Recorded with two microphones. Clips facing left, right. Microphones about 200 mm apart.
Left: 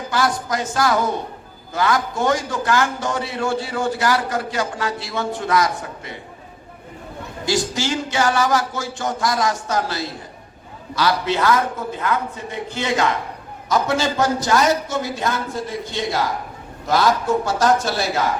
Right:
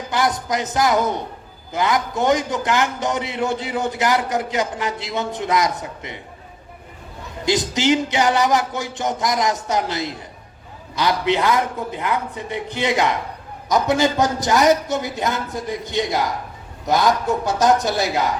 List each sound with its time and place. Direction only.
0.1 s a man's voice: 20° right (ahead or behind)
7.4 s a man's voice: 20° right (ahead or behind)